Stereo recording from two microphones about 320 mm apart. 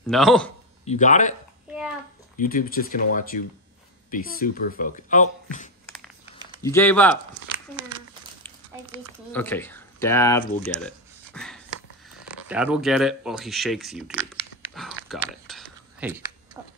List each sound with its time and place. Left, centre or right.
0.0 s speech: centre
0.8 s speech: left
2.3 s speech: left
6.6 s speech: centre
9.3 s speech: centre
10.6 s a sound: centre
12.4 s speech: centre
14.7 s a sound: centre